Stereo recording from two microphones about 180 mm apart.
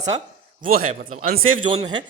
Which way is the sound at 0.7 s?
50° right (ahead or behind).